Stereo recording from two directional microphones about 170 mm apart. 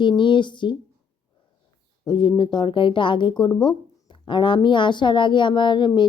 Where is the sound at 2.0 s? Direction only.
25° left (ahead or behind).